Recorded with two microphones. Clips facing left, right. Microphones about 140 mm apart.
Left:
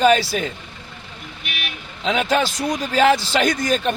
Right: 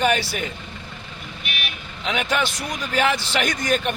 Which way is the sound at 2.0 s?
35° left (ahead or behind).